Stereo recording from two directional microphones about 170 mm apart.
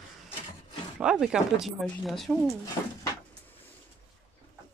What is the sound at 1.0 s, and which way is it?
Speech, 5° right (ahead or behind).